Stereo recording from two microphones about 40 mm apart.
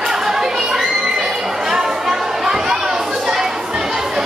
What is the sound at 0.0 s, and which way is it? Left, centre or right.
Chatter, centre.